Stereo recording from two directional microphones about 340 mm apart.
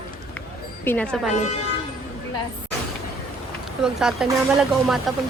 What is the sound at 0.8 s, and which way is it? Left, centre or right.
Speech, centre.